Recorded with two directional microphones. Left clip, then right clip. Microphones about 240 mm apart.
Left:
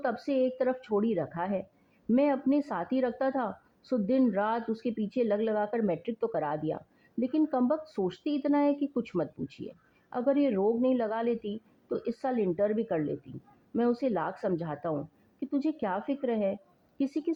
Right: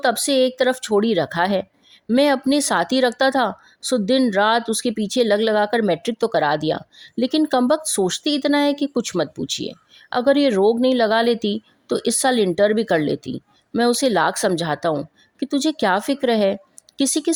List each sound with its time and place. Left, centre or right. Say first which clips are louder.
0.0 s a woman's voice: right 11 dB; right